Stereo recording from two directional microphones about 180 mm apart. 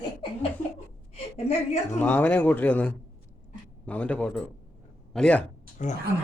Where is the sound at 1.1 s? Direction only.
35° left (ahead or behind).